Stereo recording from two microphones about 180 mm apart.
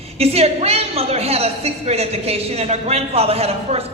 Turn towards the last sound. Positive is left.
turn(degrees=-35)  # may be behind; listen again after turning